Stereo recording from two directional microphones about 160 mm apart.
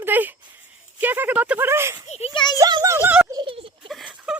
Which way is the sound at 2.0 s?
45° left (ahead or behind).